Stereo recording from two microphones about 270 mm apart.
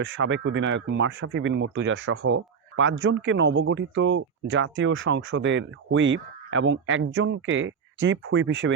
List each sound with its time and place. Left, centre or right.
0.0 s speech: right